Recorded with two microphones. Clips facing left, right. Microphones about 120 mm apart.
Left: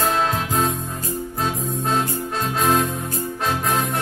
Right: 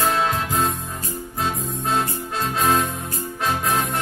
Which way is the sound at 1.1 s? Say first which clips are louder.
Left 1 dB; centre (ahead or behind).